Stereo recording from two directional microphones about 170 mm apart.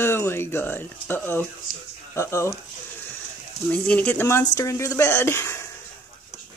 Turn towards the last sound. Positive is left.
turn(degrees=15)  # may be behind; listen again after turning